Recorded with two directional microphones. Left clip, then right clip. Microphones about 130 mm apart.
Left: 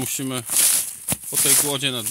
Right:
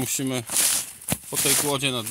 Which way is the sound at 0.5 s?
Centre (ahead or behind).